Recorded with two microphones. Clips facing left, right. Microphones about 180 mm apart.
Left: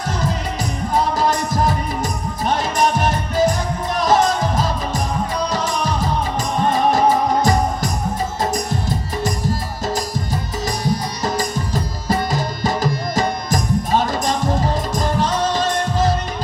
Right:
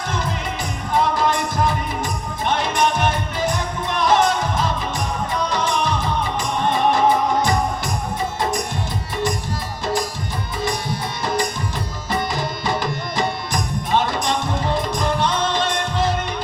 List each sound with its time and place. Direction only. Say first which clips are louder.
0.9 s music: even; 40° left (ahead or behind)
7.4 s music: left 3 dB; 40° left (ahead or behind)
11.3 s tabla: left 1 dB; 40° left (ahead or behind)
14.9 s music: left 1 dB; 40° left (ahead or behind)